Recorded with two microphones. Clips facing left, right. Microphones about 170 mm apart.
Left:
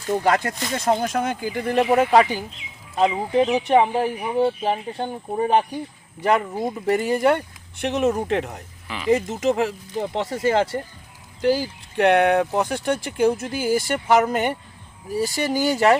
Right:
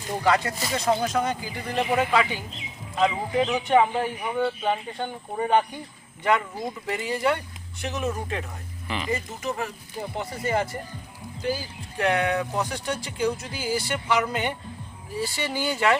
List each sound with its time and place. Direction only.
0.3 s speech: 50° left (ahead or behind); by 8.5 s 70° left (ahead or behind)
9.0 s speech: 90° left
11.4 s speech: 70° left (ahead or behind); by 16.0 s 40° left (ahead or behind)